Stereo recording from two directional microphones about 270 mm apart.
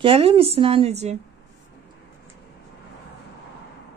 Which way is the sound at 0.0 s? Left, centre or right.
Right.